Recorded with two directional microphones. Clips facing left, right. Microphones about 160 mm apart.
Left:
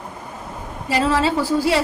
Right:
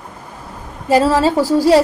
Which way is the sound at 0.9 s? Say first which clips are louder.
Right 6 dB; 40° right (ahead or behind).